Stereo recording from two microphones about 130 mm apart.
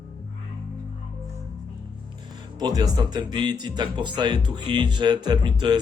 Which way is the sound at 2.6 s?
30° right (ahead or behind).